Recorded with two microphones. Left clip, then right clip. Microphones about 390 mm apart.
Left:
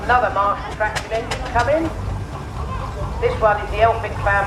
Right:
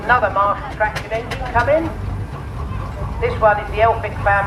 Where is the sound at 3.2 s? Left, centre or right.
Centre.